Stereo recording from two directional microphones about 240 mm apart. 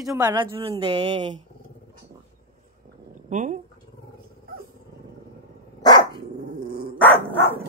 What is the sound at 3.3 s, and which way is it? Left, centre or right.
Speech, right.